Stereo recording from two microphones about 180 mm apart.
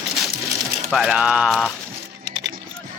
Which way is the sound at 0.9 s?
5° right (ahead or behind).